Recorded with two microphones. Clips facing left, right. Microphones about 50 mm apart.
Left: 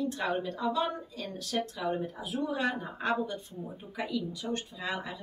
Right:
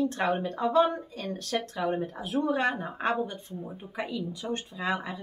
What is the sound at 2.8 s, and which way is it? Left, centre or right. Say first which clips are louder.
Speech: right 2 dB; right.